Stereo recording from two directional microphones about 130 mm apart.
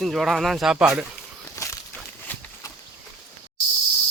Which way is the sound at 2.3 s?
15° left (ahead or behind).